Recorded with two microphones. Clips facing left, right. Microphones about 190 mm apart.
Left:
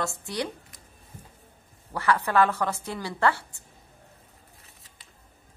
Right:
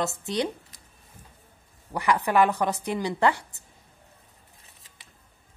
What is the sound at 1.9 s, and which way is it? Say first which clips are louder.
A woman's voice: right 1 dB; 15° right (ahead or behind).